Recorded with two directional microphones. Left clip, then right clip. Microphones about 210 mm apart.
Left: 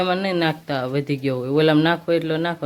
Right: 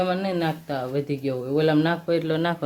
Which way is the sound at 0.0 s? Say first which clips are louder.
Left 4 dB; 20° left (ahead or behind).